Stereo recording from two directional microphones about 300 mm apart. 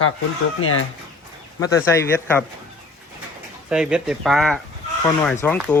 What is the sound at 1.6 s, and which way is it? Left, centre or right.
Speech, centre.